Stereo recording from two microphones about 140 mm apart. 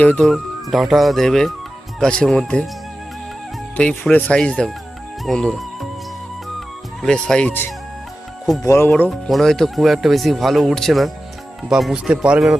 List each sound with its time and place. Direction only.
0.0 s speech: 10° left (ahead or behind)
3.8 s speech: 10° left (ahead or behind)
5.2 s music: 5° left (ahead or behind)
7.0 s speech: 5° left (ahead or behind)
9.0 s speech: centre (ahead or behind)